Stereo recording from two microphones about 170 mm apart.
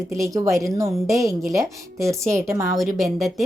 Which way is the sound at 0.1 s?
15° right (ahead or behind).